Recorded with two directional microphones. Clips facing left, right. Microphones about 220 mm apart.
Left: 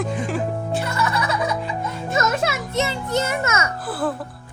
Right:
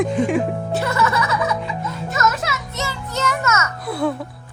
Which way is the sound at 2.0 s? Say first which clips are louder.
Left 1 dB; 30° left (ahead or behind).